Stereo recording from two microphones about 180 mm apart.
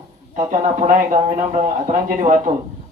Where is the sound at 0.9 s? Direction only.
45° right (ahead or behind).